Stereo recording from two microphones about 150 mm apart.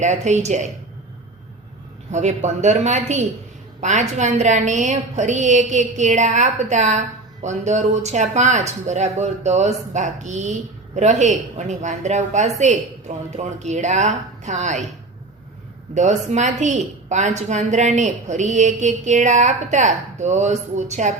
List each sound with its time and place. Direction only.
0.0 s speech: 50° right (ahead or behind)
2.1 s a woman's voice: 50° right (ahead or behind)
16.0 s speech: 50° right (ahead or behind)